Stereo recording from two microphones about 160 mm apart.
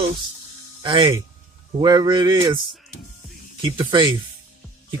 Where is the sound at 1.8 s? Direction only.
25° right (ahead or behind).